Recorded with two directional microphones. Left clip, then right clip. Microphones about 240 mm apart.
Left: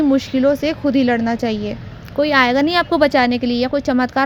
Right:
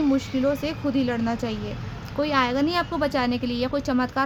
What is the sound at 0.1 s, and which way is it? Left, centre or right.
A woman's voice, left.